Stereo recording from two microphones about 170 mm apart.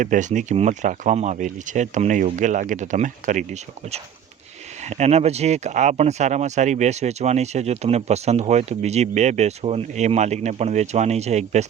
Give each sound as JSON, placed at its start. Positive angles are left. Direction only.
{"t": 0.0, "sound": "speech", "side_deg": -45}